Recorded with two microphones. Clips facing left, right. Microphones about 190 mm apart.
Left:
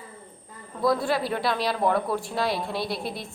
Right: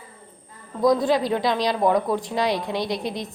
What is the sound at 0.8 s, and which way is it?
A woman's voice, 20° right (ahead or behind).